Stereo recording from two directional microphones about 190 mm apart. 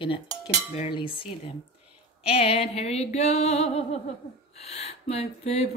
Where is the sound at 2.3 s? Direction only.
30° left (ahead or behind).